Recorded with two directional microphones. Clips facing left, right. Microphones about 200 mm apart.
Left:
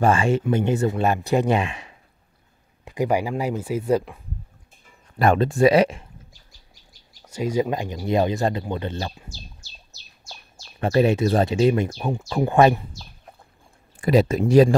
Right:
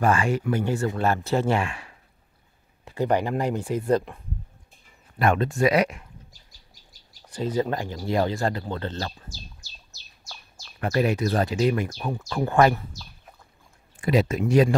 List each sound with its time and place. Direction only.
0.0 s speech: 25° left (ahead or behind); by 4.2 s centre (ahead or behind)
5.2 s speech: 35° left (ahead or behind)
7.2 s speech: 10° left (ahead or behind)
10.8 s speech: 25° left (ahead or behind)
14.0 s speech: 35° left (ahead or behind)